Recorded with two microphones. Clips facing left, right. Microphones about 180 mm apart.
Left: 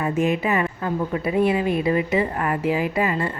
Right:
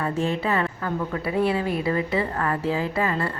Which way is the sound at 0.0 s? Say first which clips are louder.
Left 3 dB; 15° left (ahead or behind).